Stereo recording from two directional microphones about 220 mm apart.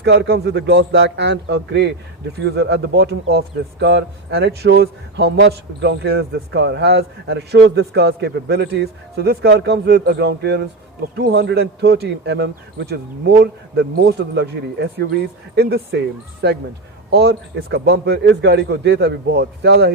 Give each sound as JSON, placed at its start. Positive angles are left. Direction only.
{"t": 0.0, "sound": "speech", "side_deg": -50}